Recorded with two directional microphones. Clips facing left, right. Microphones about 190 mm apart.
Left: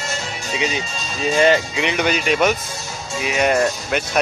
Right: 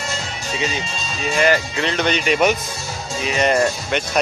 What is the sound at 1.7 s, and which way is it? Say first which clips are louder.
Speech: even; 15° left (ahead or behind).